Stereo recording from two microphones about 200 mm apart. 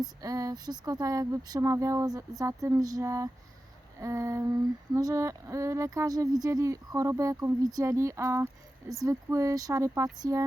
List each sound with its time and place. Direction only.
0.0 s speech: 15° right (ahead or behind)